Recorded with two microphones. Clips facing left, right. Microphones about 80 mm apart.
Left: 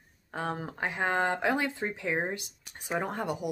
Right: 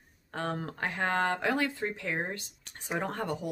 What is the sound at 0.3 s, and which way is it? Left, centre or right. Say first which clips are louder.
Speech: even; centre.